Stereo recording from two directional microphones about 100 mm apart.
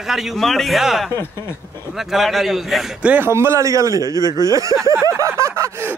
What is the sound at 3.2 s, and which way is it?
A man's voice, 25° right (ahead or behind).